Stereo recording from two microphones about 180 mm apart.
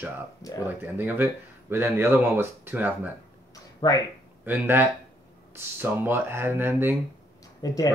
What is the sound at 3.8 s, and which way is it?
Speech, 25° left (ahead or behind).